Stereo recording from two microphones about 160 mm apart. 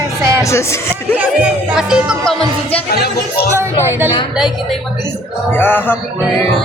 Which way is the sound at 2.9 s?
85° left.